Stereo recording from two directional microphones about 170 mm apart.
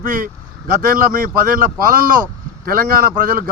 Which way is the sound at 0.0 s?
55° right (ahead or behind).